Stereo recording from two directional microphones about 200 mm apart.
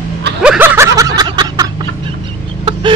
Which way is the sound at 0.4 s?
5° right (ahead or behind).